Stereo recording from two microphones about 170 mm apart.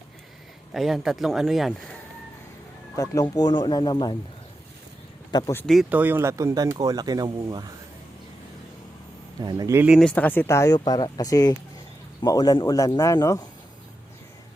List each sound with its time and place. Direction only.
0.7 s speech: centre (ahead or behind)
2.9 s speech: 20° left (ahead or behind)
5.3 s speech: 25° left (ahead or behind)
5.5 s speech: 5° left (ahead or behind)
5.9 s speech: 10° right (ahead or behind)
9.4 s speech: 25° right (ahead or behind)
10.0 s speech: 10° left (ahead or behind)